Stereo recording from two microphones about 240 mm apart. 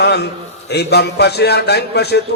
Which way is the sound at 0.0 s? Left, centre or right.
Left.